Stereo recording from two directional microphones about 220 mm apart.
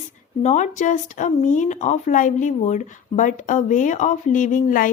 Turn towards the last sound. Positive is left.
turn(degrees=35)  # may be behind; listen again after turning